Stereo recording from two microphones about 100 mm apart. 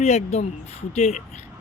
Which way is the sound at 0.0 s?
90° left.